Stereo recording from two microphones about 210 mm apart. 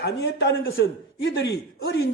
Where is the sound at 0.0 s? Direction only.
55° left (ahead or behind).